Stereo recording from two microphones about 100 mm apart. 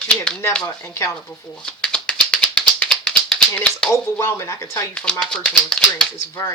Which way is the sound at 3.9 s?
25° left (ahead or behind).